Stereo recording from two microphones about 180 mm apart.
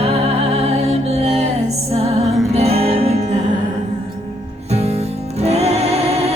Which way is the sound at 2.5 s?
35° right (ahead or behind).